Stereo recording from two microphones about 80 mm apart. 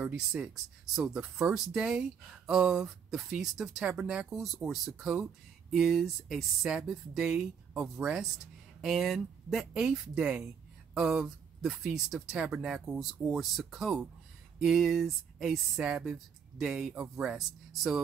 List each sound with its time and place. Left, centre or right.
0.0 s speech: centre
4.0 s speech: centre
4.3 s speech: centre
11.0 s speech: centre